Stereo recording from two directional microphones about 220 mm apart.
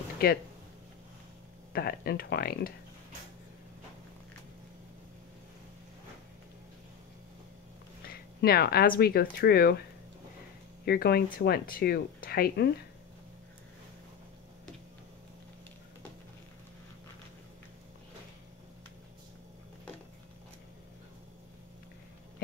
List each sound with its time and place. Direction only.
0.2 s speech: 45° left (ahead or behind)
1.7 s speech: 45° left (ahead or behind)
8.1 s speech: 45° left (ahead or behind)
10.9 s speech: 45° left (ahead or behind)